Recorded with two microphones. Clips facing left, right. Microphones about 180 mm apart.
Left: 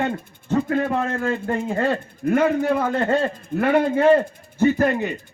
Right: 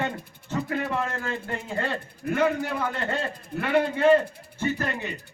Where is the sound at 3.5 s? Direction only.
50° left (ahead or behind).